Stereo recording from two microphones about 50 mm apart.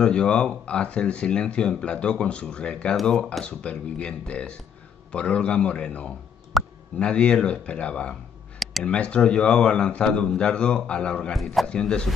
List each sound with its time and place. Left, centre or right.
0.0 s speech: centre
6.5 s a sound: centre
7.0 s speech: left
11.3 s a man's voice: centre
11.6 s speech: centre